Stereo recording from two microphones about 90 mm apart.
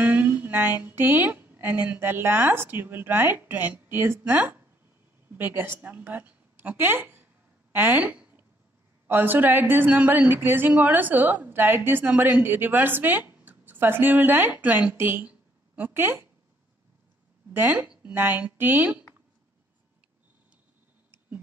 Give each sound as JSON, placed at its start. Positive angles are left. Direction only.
{"t": 0.0, "sound": "a woman's voice", "side_deg": -20}
{"t": 7.7, "sound": "a sound", "side_deg": -20}
{"t": 9.0, "sound": "a woman's voice", "side_deg": -25}
{"t": 17.5, "sound": "a woman's voice", "side_deg": -20}